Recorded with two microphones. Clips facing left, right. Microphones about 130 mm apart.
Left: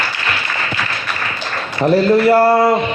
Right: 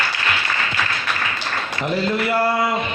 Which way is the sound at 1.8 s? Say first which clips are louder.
Left 10 dB; 40° left (ahead or behind).